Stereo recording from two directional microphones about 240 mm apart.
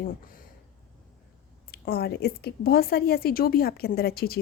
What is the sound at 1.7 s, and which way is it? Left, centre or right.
A woman's voice, left.